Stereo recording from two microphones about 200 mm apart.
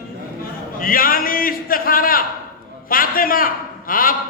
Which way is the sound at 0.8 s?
45° left (ahead or behind).